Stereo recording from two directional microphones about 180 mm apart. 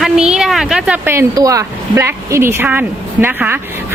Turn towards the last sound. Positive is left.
turn(degrees=-10)  # may be behind; listen again after turning